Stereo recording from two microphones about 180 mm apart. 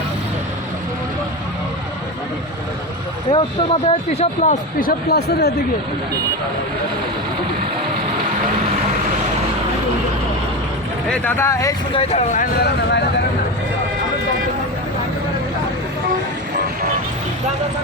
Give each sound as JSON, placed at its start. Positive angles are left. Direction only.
{"t": 3.3, "sound": "speech", "side_deg": 35}
{"t": 11.1, "sound": "speech", "side_deg": 10}
{"t": 11.9, "sound": "speech", "side_deg": 35}
{"t": 12.4, "sound": "speech", "side_deg": 65}